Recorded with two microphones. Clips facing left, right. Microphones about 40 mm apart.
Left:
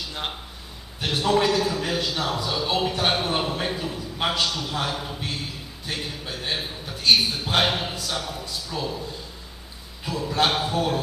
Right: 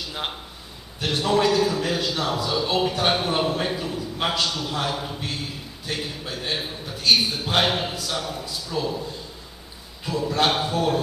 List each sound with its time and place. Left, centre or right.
0.1 s a man's voice: centre
10.0 s a man's voice: centre